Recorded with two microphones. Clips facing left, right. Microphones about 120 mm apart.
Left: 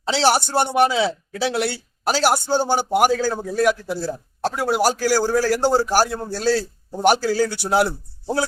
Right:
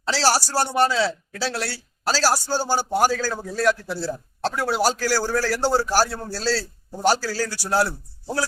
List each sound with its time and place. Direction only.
0.1 s speech: 20° left (ahead or behind)